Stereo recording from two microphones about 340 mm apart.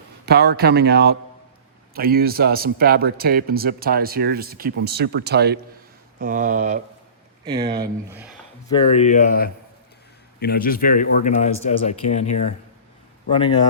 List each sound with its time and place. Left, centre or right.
0.3 s speech: right; by 8.3 s centre
8.7 s speech: centre